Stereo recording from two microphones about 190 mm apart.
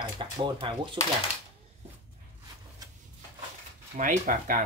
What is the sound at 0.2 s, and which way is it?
Speech, 25° right (ahead or behind).